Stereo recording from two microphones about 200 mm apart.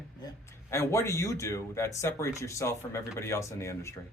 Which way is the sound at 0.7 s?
15° left (ahead or behind).